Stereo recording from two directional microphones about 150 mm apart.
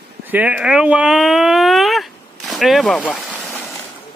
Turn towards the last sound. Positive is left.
turn(degrees=0)  # may be behind; listen again after turning